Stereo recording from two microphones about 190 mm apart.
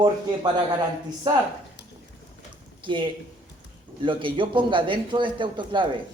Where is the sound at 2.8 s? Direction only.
25° right (ahead or behind).